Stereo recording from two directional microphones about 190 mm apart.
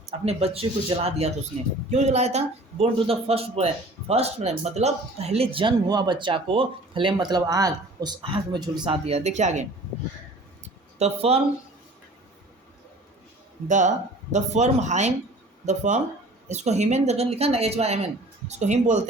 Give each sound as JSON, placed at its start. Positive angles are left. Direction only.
{"t": 0.0, "sound": "speech", "side_deg": -35}
{"t": 10.6, "sound": "a sound", "side_deg": -35}
{"t": 13.7, "sound": "speech", "side_deg": -40}